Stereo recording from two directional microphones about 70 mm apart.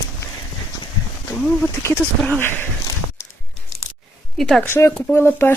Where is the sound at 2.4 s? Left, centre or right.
Left.